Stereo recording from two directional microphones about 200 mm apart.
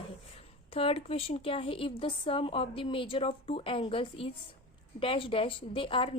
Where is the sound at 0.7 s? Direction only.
30° left (ahead or behind).